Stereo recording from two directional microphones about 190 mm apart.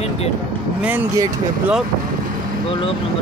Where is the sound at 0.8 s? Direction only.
10° right (ahead or behind).